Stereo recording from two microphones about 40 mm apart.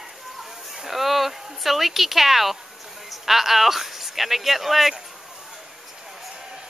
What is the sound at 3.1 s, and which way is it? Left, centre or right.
Speech, centre.